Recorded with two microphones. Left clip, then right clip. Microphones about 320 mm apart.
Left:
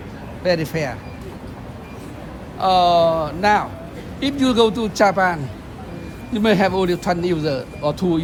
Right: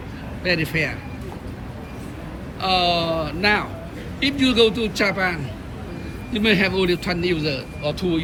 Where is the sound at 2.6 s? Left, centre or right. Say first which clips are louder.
Left 6 dB; centre.